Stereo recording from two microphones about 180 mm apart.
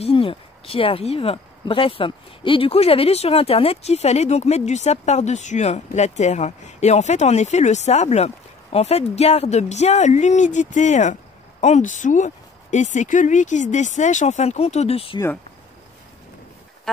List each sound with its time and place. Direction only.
0.0 s speech: 30° left (ahead or behind)